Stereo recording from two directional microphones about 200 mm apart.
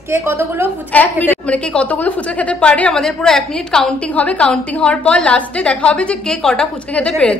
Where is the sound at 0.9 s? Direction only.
10° left (ahead or behind).